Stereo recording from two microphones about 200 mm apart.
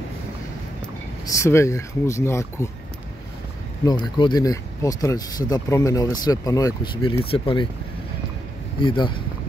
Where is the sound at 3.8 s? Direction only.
20° left (ahead or behind).